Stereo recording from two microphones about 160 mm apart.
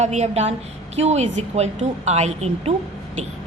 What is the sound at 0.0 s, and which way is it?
A woman's voice, 45° right (ahead or behind).